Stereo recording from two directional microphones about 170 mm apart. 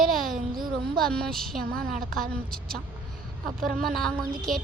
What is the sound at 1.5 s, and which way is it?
Speech, 55° right (ahead or behind).